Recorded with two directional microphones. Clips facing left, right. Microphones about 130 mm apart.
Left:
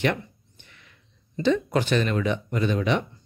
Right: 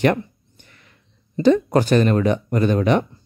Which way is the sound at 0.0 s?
45° right (ahead or behind).